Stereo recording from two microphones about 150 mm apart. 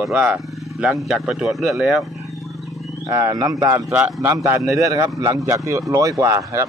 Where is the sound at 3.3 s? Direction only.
25° right (ahead or behind).